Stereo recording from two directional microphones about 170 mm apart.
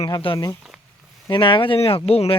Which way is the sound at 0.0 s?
30° left (ahead or behind).